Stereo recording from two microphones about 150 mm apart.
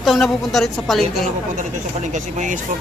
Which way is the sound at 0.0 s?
Centre (ahead or behind).